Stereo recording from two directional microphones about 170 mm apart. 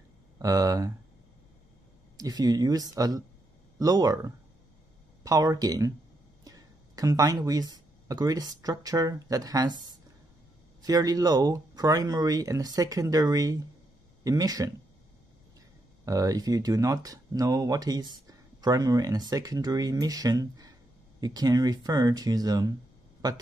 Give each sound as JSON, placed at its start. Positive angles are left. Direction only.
{"t": 0.4, "sound": "speech", "side_deg": -20}
{"t": 2.1, "sound": "speech", "side_deg": -20}
{"t": 16.1, "sound": "speech", "side_deg": -20}